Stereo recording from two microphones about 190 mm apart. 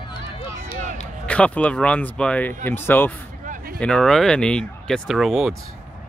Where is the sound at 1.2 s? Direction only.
5° left (ahead or behind).